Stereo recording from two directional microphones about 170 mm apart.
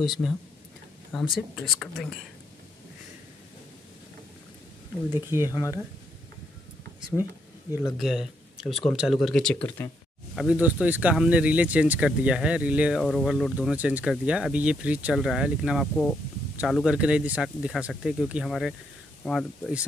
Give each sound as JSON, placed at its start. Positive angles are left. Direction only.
{"t": 0.0, "sound": "speech", "side_deg": 0}
{"t": 5.1, "sound": "speech", "side_deg": -15}
{"t": 5.5, "sound": "speech", "side_deg": 20}
{"t": 7.7, "sound": "speech", "side_deg": -15}
{"t": 8.0, "sound": "speech", "side_deg": 0}
{"t": 10.3, "sound": "speech", "side_deg": -5}